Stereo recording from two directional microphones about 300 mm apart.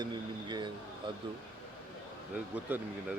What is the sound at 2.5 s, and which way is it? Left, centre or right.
Speech, centre.